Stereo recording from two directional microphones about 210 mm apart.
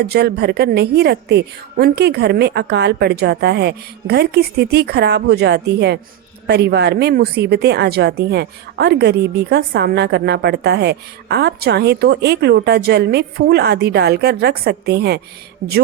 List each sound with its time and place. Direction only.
0.0 s a woman's voice: 50° right (ahead or behind)